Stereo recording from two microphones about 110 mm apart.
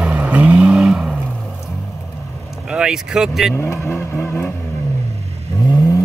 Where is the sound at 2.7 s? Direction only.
5° right (ahead or behind).